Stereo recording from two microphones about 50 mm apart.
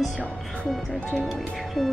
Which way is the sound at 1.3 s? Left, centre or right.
Centre.